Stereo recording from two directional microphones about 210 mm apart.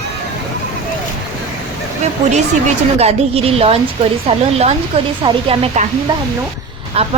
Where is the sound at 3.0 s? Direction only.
30° right (ahead or behind).